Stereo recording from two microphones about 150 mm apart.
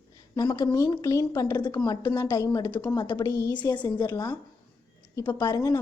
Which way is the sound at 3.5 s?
30° left (ahead or behind).